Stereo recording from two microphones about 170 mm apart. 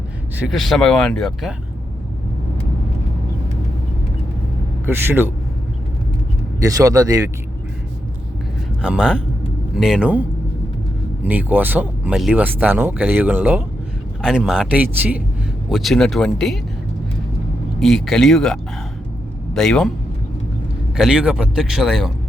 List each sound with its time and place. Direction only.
0.3 s speech: centre (ahead or behind)
4.9 s speech: 10° right (ahead or behind)
6.6 s a man's voice: 20° right (ahead or behind)
8.8 s speech: 5° right (ahead or behind)
14.2 s speech: centre (ahead or behind)
15.7 s speech: centre (ahead or behind)
17.7 s speech: centre (ahead or behind)
20.9 s speech: 5° right (ahead or behind)